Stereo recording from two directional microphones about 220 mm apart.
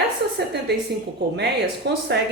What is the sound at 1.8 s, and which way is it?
Speech, 50° right (ahead or behind).